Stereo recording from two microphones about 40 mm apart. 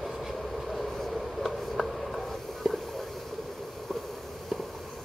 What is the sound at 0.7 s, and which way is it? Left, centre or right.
Writing, centre.